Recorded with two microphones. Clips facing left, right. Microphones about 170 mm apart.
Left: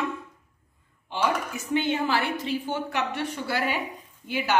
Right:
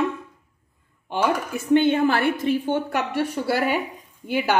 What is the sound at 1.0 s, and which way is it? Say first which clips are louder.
A woman's voice: right 4 dB; 55° right (ahead or behind).